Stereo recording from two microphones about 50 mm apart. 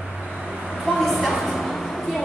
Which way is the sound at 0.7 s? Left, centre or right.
Centre.